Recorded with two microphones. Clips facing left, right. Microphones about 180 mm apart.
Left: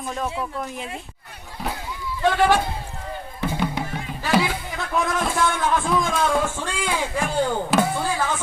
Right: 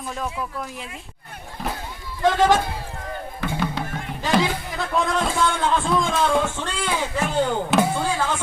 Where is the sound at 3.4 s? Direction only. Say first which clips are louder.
Left 1 dB; 15° left (ahead or behind).